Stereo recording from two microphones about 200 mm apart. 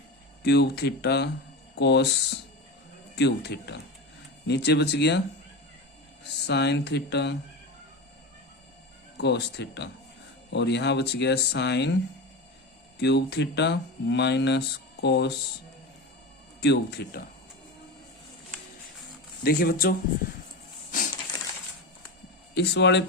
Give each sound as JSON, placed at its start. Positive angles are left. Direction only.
{"t": 0.4, "sound": "speech", "side_deg": 55}
{"t": 6.2, "sound": "speech", "side_deg": 55}
{"t": 9.1, "sound": "speech", "side_deg": 60}
{"t": 13.0, "sound": "speech", "side_deg": 60}
{"t": 16.6, "sound": "speech", "side_deg": 55}
{"t": 19.4, "sound": "speech", "side_deg": 50}
{"t": 20.9, "sound": "crushing", "side_deg": 40}
{"t": 22.5, "sound": "speech", "side_deg": 60}